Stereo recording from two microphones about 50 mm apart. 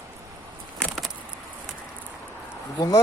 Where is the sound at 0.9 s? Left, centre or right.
Centre.